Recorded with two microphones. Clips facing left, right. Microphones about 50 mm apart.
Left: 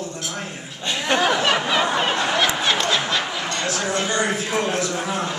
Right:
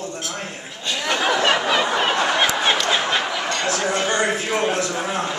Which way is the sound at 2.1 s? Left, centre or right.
Right.